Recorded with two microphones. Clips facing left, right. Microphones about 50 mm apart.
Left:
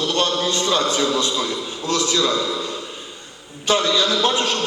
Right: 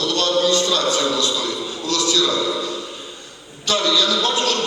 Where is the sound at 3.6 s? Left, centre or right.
Left.